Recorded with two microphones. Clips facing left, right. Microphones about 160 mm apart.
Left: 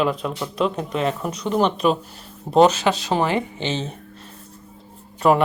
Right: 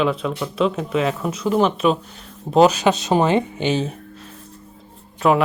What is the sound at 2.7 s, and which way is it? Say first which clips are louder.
Speech: right 3 dB; 20° right (ahead or behind).